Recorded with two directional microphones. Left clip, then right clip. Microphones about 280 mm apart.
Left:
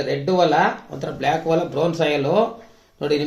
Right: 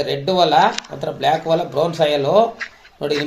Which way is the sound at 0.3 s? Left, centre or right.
Right.